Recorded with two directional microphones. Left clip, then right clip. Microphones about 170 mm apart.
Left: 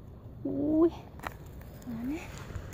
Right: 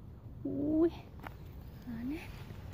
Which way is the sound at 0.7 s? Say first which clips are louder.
Left 5 dB; 5° left (ahead or behind).